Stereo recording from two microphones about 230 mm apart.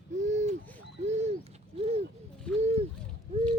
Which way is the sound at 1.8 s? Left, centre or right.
Right.